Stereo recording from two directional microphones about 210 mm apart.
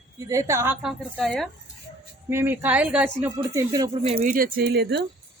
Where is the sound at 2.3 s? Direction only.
10° right (ahead or behind); by 5.0 s 50° right (ahead or behind).